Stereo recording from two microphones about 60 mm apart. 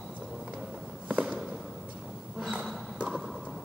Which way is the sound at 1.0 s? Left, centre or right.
Right.